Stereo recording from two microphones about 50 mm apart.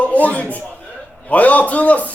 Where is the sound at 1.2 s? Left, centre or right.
Left.